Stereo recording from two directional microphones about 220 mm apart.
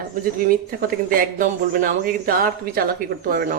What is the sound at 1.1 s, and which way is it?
Speech, 40° right (ahead or behind).